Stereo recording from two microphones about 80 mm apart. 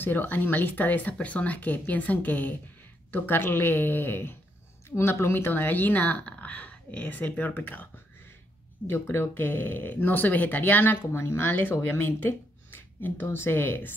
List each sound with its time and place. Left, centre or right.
0.0 s speech: left
11.1 s speech: left